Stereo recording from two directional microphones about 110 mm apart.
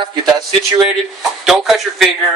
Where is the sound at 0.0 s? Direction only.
45° right (ahead or behind).